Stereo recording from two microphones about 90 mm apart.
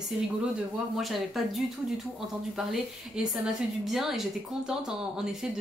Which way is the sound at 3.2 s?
10° right (ahead or behind).